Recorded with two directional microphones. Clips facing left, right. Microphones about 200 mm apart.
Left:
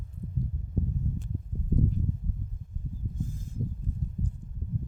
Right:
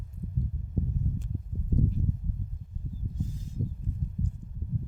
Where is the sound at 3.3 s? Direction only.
50° left (ahead or behind).